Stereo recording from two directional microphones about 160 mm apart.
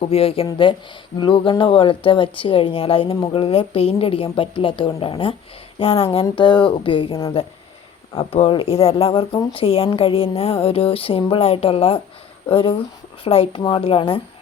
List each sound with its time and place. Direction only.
0.0 s speech: 35° left (ahead or behind)
8.3 s speech: 35° left (ahead or behind)